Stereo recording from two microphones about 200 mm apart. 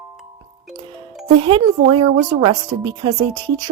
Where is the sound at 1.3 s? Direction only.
25° right (ahead or behind).